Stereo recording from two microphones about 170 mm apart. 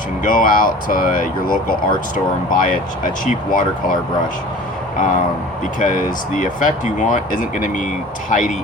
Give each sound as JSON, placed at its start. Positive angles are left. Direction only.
{"t": 0.2, "sound": "speech", "side_deg": 55}
{"t": 4.9, "sound": "speech", "side_deg": 50}
{"t": 6.3, "sound": "speech", "side_deg": 50}